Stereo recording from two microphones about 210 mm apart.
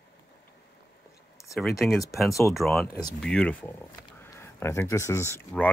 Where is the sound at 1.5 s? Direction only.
Centre (ahead or behind).